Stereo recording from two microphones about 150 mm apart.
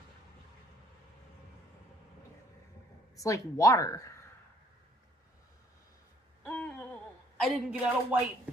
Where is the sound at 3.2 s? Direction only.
20° left (ahead or behind).